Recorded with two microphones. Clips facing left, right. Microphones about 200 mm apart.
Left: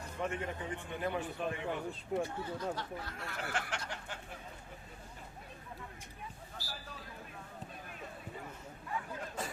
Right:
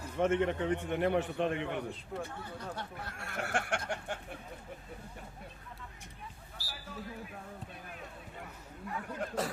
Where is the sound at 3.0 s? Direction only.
55° right (ahead or behind).